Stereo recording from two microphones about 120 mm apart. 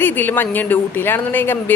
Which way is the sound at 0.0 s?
15° left (ahead or behind).